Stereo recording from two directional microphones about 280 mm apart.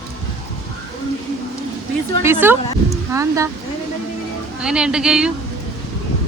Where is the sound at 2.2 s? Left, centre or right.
Centre.